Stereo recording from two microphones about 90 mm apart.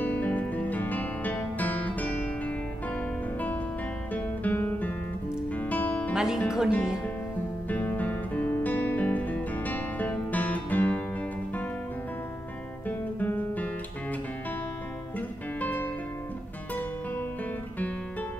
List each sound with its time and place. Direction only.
0.0 s music: 20° left (ahead or behind)
4.1 s music: 20° left (ahead or behind)
6.1 s speech: 5° right (ahead or behind)
7.6 s music: 20° left (ahead or behind)
12.8 s guitar: 20° left (ahead or behind)
15.1 s music: 20° left (ahead or behind)